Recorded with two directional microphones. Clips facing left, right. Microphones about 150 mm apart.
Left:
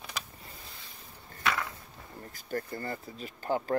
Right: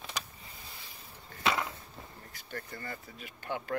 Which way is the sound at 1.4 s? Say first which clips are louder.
Right 1 dB; 20° right (ahead or behind).